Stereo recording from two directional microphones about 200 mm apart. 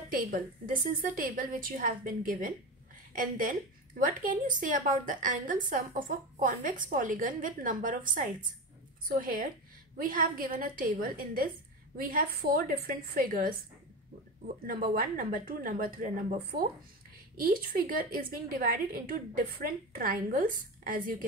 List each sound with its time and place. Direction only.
0.1 s a woman's voice: 45° right (ahead or behind)
14.7 s a woman's voice: 45° right (ahead or behind)